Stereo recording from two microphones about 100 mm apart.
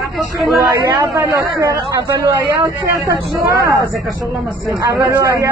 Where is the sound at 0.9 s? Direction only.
35° right (ahead or behind).